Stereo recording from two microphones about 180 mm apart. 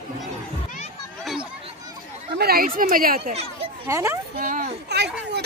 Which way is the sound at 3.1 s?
35° right (ahead or behind).